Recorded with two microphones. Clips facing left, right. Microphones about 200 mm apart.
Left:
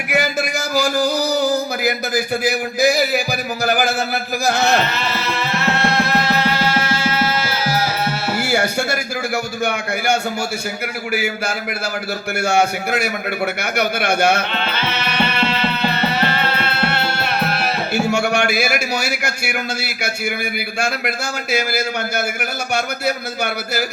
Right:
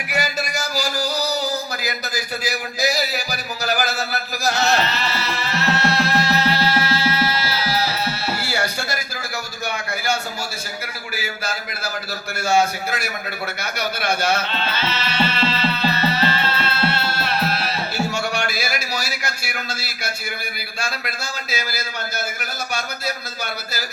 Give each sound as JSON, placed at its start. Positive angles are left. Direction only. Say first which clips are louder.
{"t": 0.1, "sound": "a sound", "louder": "left 5 dB", "side_deg": 55}
{"t": 3.6, "sound": "music", "louder": "left 4 dB", "side_deg": 50}
{"t": 11.1, "sound": "a man's voice", "louder": "left 6 dB", "side_deg": 55}
{"t": 21.5, "sound": "speech", "louder": "left 10 dB", "side_deg": 60}